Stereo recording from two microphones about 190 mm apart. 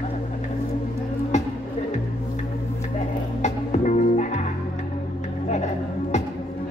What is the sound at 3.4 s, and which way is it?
Music, 40° left (ahead or behind).